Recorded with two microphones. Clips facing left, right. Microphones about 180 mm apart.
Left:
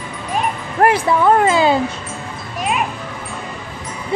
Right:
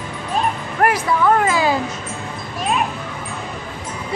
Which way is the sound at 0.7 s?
30° left (ahead or behind).